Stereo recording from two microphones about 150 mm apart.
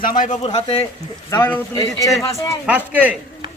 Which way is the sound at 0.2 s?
50° left (ahead or behind).